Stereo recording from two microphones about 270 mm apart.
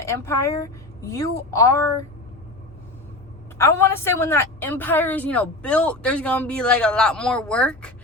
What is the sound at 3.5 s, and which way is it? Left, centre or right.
A woman's voice, centre.